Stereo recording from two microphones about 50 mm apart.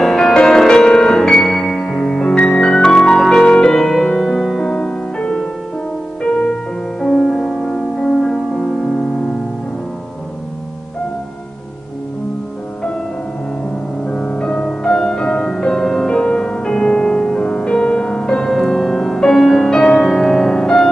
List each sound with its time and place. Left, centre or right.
0.0 s music: centre
4.3 s music: centre
7.0 s music: centre
14.0 s music: centre